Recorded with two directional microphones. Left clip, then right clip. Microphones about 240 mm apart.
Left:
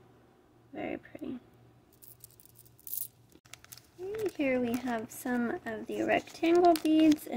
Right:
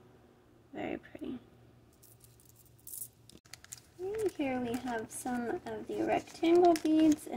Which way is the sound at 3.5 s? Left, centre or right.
Centre.